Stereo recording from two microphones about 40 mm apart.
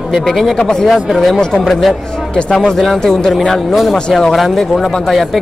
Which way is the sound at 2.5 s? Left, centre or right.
Centre.